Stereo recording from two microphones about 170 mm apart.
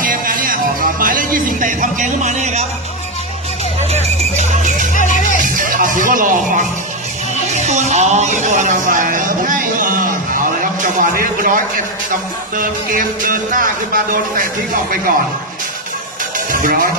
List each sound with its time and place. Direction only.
0.0 s music: 55° right (ahead or behind)
3.9 s music: 40° right (ahead or behind)
4.9 s music: 50° left (ahead or behind)
5.4 s music: 50° right (ahead or behind)
7.5 s a man's voice: 40° right (ahead or behind)
16.5 s speech: 55° right (ahead or behind)